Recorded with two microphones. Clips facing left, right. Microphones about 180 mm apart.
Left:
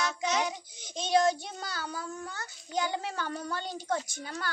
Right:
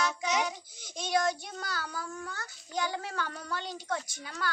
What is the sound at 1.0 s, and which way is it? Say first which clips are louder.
A child's voice: left 4 dB; 25° left (ahead or behind).